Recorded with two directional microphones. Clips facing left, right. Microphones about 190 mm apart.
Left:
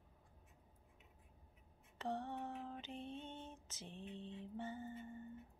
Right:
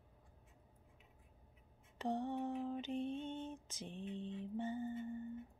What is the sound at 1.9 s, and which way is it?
Lullaby, 15° right (ahead or behind).